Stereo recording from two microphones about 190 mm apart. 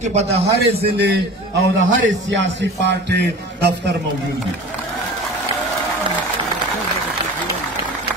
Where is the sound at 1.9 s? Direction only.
75° right (ahead or behind).